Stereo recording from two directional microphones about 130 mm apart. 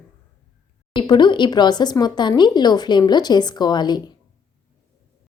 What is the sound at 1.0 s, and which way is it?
Speech, 35° left (ahead or behind).